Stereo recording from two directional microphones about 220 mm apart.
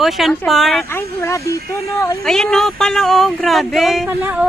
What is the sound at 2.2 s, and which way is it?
Speech, centre (ahead or behind).